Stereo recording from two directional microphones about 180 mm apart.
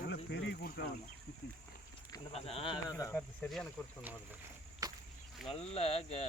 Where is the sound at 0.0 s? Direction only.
70° left (ahead or behind).